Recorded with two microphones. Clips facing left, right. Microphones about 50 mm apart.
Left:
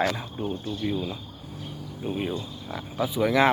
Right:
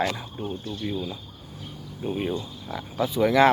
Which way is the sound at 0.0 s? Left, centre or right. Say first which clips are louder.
Left 1 dB; centre.